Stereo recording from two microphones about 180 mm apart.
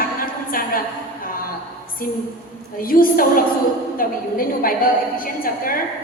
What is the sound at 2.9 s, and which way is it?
A capella, 50° left (ahead or behind).